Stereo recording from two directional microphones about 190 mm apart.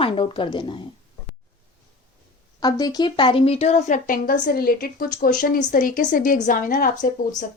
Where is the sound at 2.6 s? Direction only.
20° left (ahead or behind); by 7.0 s 45° left (ahead or behind).